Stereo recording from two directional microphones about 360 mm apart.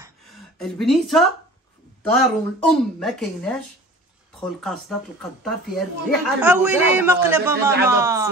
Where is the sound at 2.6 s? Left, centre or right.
Centre.